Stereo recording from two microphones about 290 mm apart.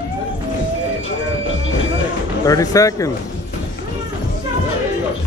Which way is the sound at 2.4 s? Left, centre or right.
Centre.